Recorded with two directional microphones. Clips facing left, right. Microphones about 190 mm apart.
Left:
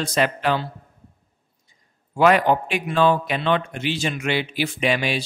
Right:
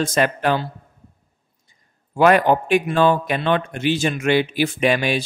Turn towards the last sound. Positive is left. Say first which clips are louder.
# right 3 dB
turn(degrees=-50)  # may be behind; listen again after turning